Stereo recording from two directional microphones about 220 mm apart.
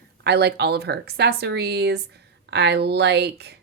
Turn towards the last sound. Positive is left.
turn(degrees=-50)  # may be behind; listen again after turning